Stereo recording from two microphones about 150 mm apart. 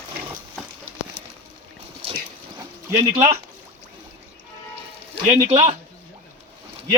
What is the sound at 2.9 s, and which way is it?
Speech, 15° right (ahead or behind).